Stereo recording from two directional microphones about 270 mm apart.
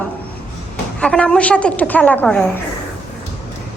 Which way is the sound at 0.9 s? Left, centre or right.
Centre.